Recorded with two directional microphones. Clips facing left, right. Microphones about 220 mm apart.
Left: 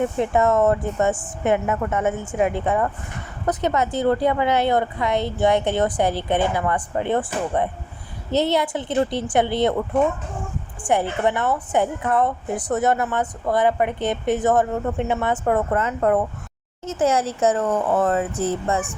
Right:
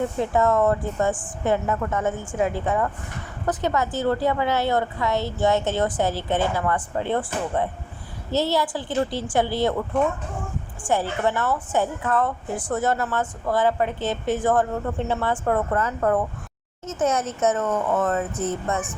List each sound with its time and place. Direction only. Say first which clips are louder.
0.2 s a woman's voice: left 1 dB; 20° left (ahead or behind)
10.8 s a woman's voice: left 2 dB; 20° left (ahead or behind)